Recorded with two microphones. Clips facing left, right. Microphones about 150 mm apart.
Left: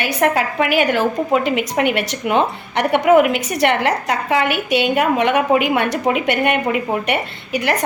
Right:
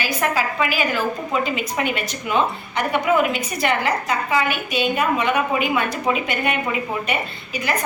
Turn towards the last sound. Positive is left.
turn(degrees=80)